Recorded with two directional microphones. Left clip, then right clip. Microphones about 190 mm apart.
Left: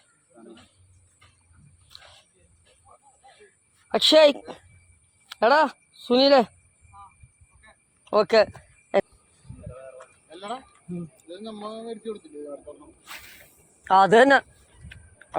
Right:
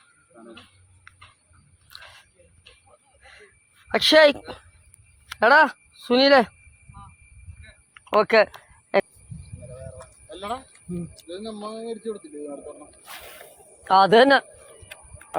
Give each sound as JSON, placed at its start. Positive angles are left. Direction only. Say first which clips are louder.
{"t": 0.3, "sound": "cricket", "louder": "right 2 dB", "side_deg": -15}
{"t": 3.8, "sound": "speech", "louder": "right 1 dB", "side_deg": 5}
{"t": 8.1, "sound": "a sound", "louder": "right 1 dB", "side_deg": 5}
{"t": 10.0, "sound": "a sound", "louder": "right 4 dB", "side_deg": -55}
{"t": 11.2, "sound": "speech", "louder": "right 3 dB", "side_deg": -60}
{"t": 13.8, "sound": "speech", "louder": "right 1 dB", "side_deg": 0}